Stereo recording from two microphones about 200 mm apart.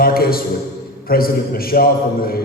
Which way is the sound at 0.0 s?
50° left (ahead or behind).